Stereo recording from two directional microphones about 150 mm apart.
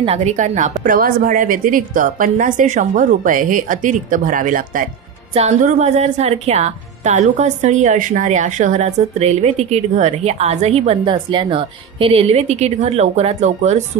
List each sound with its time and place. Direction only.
0.0 s a woman's voice: 45° right (ahead or behind)
0.8 s a woman's voice: 70° right (ahead or behind)
5.9 s a woman's voice: 45° right (ahead or behind)